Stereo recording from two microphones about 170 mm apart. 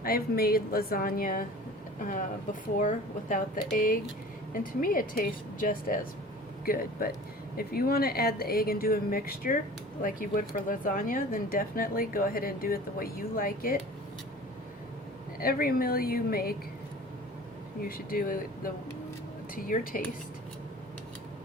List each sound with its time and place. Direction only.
0.0 s speech: 65° left (ahead or behind)
7.5 s speech: 65° left (ahead or behind)
15.4 s speech: 60° left (ahead or behind)
17.8 s speech: 60° left (ahead or behind)